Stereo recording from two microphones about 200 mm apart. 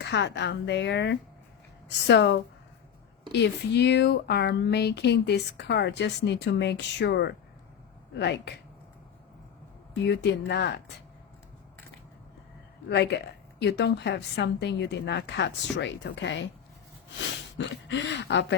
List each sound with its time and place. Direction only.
0.0 s speech: 60° left (ahead or behind)
9.9 s speech: 60° left (ahead or behind)
12.9 s speech: 55° left (ahead or behind)
17.6 s speech: 65° left (ahead or behind)